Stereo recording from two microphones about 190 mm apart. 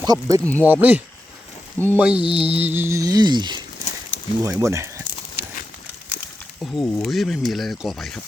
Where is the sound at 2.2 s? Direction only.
30° right (ahead or behind).